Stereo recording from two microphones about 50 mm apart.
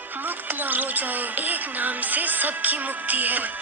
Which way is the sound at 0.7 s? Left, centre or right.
Right.